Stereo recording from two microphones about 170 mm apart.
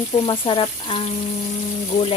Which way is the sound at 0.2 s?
30° left (ahead or behind).